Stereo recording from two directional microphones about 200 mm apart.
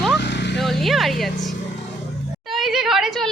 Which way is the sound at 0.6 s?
Centre (ahead or behind).